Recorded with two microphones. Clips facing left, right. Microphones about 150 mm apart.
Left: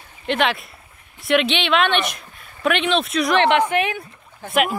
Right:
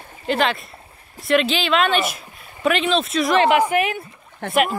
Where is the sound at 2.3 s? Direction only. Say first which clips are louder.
Right 2 dB; 15° right (ahead or behind).